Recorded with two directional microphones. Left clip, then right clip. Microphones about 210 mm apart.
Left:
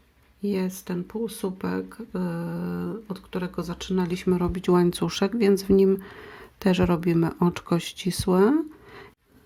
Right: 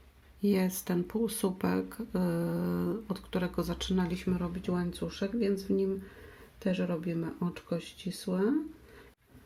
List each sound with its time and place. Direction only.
0.4 s speech: 5° left (ahead or behind); by 8.5 s 40° left (ahead or behind)